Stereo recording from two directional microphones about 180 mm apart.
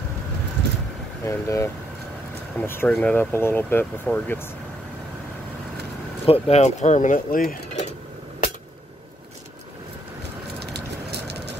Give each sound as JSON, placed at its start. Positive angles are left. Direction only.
{"t": 1.2, "sound": "speech", "side_deg": 15}
{"t": 6.2, "sound": "speech", "side_deg": 35}
{"t": 10.6, "sound": "vehicle", "side_deg": -65}